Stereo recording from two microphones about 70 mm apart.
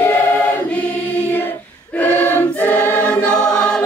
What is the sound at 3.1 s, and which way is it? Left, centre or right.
Choir, centre.